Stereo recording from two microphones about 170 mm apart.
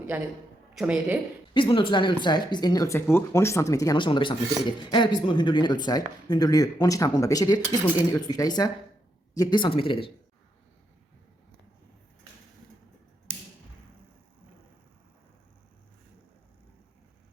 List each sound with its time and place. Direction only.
0.1 s speech: 10° right (ahead or behind)
1.5 s speech: 30° left (ahead or behind)